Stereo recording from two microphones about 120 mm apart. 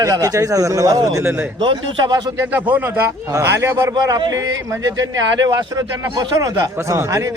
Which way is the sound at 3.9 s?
40° right (ahead or behind).